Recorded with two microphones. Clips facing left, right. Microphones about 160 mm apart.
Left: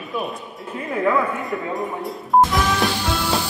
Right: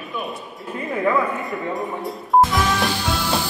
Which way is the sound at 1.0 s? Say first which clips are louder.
Even; centre (ahead or behind).